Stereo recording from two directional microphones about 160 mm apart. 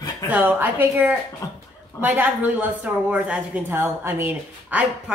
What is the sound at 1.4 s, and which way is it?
Speech, 20° left (ahead or behind).